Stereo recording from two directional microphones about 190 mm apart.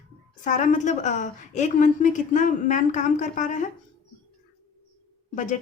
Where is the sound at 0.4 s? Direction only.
40° left (ahead or behind).